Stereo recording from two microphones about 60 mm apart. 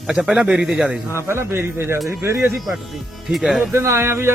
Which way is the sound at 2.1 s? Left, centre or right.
Right.